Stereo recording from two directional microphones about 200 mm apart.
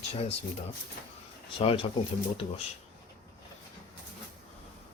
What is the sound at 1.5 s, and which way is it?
Speech, 25° left (ahead or behind).